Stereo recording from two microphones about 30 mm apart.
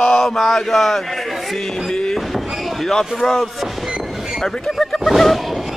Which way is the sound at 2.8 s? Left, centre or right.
Centre.